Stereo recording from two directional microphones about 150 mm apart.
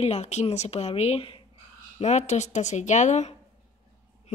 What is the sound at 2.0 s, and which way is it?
Speech, 50° left (ahead or behind).